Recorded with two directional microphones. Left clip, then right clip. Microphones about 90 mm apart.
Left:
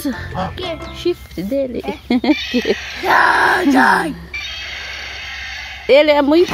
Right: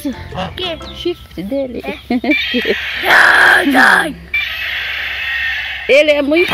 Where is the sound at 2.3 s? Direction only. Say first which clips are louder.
Right 4 dB; 30° left (ahead or behind).